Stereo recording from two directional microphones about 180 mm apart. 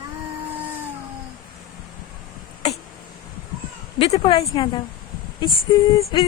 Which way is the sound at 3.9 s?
30° left (ahead or behind).